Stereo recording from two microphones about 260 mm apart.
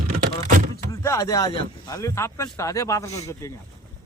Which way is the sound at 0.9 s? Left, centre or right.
Centre.